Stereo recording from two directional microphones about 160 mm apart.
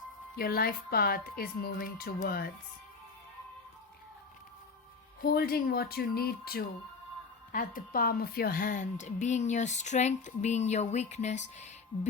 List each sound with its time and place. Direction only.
0.3 s a woman's voice: 70° left (ahead or behind)
5.2 s a woman's voice: 75° left (ahead or behind)
7.5 s a woman's voice: 60° left (ahead or behind)